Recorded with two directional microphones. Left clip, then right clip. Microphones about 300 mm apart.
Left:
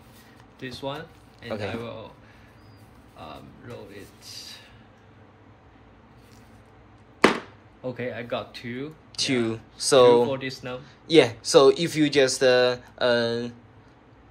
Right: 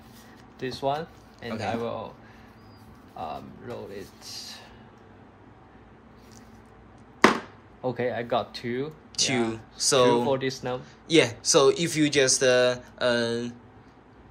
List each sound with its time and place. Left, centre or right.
0.6 s speech: right
3.2 s speech: right
7.8 s speech: right
9.1 s speech: centre
10.3 s speech: right
10.8 s speech: centre